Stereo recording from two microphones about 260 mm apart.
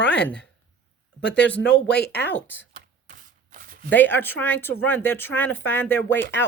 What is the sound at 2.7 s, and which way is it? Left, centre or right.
Shuffling cards, right.